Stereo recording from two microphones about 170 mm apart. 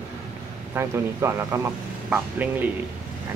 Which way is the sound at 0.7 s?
15° right (ahead or behind).